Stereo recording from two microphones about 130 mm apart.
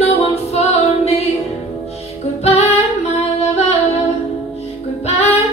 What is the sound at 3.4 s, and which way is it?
Music, 55° left (ahead or behind).